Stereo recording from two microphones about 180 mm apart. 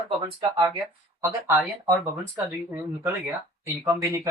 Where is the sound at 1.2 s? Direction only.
15° right (ahead or behind).